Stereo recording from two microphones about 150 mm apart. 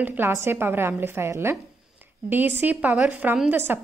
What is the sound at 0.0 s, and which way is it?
A woman's voice, 15° right (ahead or behind).